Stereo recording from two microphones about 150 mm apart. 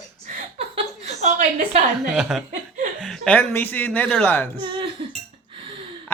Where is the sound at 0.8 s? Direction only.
45° right (ahead or behind).